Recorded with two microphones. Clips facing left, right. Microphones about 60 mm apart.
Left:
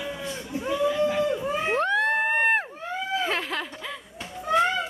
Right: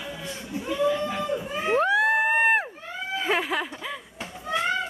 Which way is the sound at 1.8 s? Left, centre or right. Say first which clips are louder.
Right 4 dB; centre.